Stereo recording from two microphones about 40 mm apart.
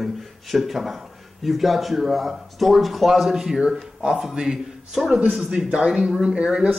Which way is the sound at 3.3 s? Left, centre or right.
Centre.